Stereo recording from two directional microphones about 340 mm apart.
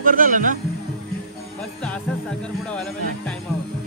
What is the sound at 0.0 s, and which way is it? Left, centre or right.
Speech, right.